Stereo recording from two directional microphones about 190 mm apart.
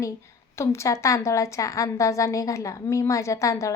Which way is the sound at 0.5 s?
15° left (ahead or behind).